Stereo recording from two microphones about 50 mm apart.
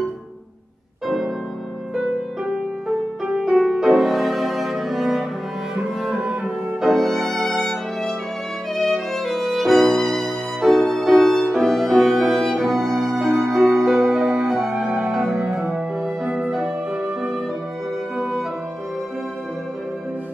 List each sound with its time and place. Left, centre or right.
1.0 s music: centre
3.3 s music: centre
3.8 s cello: centre
6.8 s violin: centre
14.8 s music: centre
15.4 s music: centre